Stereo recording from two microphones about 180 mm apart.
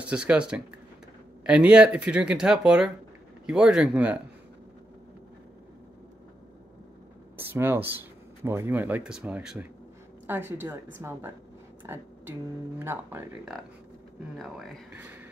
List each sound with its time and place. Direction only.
0.0 s speech: 5° right (ahead or behind)
7.3 s speech: 15° right (ahead or behind)
14.3 s speech: centre (ahead or behind)